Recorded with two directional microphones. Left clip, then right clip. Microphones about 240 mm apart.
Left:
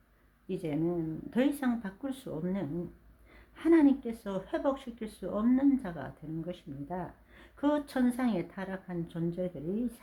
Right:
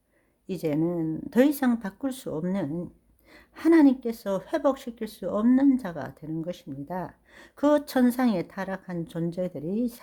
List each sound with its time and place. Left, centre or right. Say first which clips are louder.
0.4 s speech: right 6 dB; right